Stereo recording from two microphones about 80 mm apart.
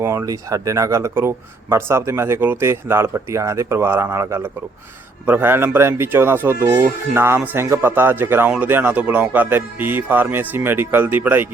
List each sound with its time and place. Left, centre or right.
0.0 s speech: right